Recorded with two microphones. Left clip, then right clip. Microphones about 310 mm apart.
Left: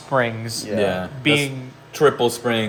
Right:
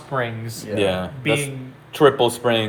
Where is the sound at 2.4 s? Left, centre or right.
Centre.